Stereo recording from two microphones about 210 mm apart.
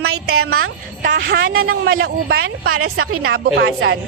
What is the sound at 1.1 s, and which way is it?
Speech, 70° right (ahead or behind).